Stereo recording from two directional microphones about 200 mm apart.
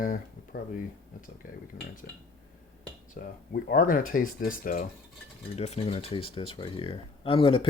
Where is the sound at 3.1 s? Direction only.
45° left (ahead or behind).